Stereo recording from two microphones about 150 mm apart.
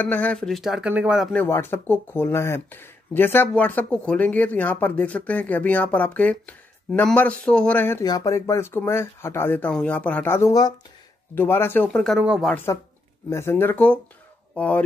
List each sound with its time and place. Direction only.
0.0 s speech: 10° left (ahead or behind); by 1.3 s 5° right (ahead or behind)
1.3 s speech: 15° left (ahead or behind)
8.0 s speech: 25° left (ahead or behind); by 12.2 s 5° left (ahead or behind)
12.2 s speech: 5° right (ahead or behind)
12.7 s speech: 20° left (ahead or behind)